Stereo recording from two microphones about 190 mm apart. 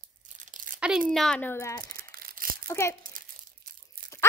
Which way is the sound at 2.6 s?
15° left (ahead or behind).